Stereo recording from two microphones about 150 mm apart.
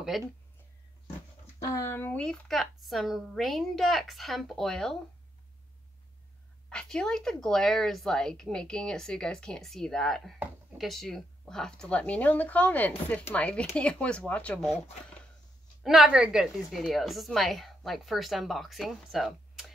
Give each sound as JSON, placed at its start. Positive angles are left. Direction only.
{"t": 0.1, "sound": "a woman's voice", "side_deg": 0}
{"t": 1.6, "sound": "a woman's voice", "side_deg": 20}
{"t": 6.7, "sound": "a woman's voice", "side_deg": 5}
{"t": 15.8, "sound": "a woman's voice", "side_deg": -5}